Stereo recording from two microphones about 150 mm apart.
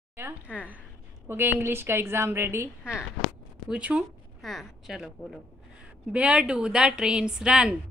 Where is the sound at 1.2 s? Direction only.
15° right (ahead or behind).